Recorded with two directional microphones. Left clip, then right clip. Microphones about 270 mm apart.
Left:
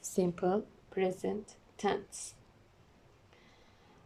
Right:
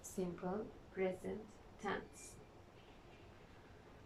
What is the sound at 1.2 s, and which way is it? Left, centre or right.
Speech, left.